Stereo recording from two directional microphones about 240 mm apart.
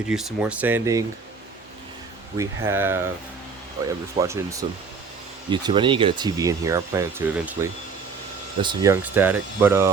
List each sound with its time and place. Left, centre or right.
0.1 s speech: centre
2.4 s speech: centre